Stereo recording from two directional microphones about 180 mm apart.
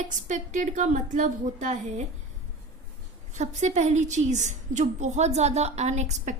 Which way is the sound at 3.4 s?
40° right (ahead or behind).